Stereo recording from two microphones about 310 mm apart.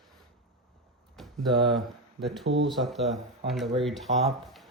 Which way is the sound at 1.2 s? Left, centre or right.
Centre.